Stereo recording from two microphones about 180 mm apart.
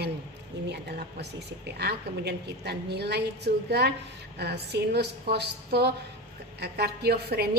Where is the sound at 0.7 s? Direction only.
65° right (ahead or behind).